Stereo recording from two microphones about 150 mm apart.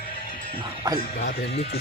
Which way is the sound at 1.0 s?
80° left.